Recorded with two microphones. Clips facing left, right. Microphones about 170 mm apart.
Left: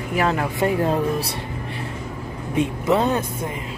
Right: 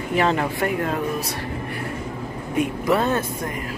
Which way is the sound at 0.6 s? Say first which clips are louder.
Left 3 dB; 30° left (ahead or behind).